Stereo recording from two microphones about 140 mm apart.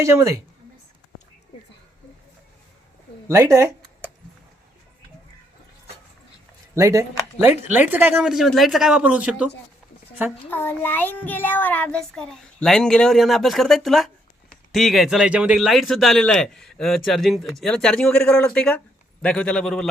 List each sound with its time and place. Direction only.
0.0 s speech: 20° right (ahead or behind)
3.2 s speech: 20° right (ahead or behind)
6.7 s speech: 20° right (ahead or behind)
10.5 s a man's voice: 15° left (ahead or behind)